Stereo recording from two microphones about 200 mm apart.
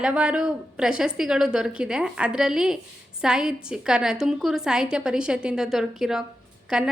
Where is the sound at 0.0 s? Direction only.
5° right (ahead or behind).